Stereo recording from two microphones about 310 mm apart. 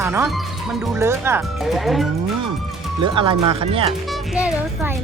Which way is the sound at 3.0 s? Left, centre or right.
Centre.